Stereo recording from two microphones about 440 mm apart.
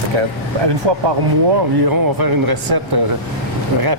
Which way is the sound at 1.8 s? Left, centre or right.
Right.